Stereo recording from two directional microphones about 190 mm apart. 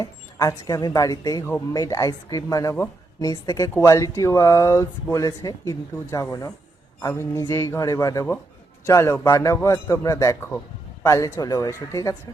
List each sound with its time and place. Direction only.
0.0 s a man's voice: 20° left (ahead or behind)